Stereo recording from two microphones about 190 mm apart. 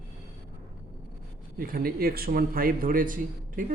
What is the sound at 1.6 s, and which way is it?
A man's voice, 50° right (ahead or behind).